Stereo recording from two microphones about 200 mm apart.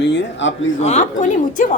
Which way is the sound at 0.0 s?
60° left (ahead or behind).